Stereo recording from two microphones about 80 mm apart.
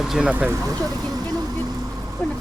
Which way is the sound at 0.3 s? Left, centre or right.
Right.